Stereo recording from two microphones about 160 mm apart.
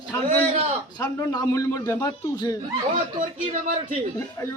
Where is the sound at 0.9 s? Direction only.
25° left (ahead or behind).